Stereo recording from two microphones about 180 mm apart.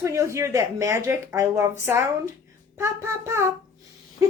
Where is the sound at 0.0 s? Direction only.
15° right (ahead or behind).